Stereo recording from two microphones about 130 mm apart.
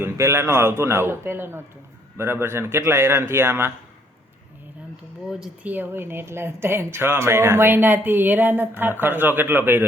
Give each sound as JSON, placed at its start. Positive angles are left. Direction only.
{"t": 0.0, "sound": "a man's voice", "side_deg": -20}
{"t": 5.3, "sound": "speech", "side_deg": -10}